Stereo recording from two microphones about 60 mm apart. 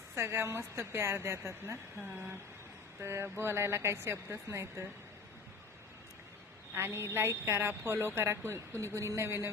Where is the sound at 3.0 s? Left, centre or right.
Right.